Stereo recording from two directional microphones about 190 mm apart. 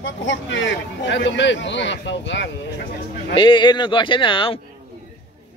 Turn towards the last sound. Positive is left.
turn(degrees=25)  # may be behind; listen again after turning